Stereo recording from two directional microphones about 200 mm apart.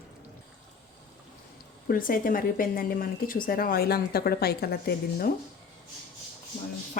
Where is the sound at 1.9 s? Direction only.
45° left (ahead or behind).